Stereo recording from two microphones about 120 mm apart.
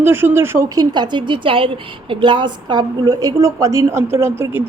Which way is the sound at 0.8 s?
40° right (ahead or behind).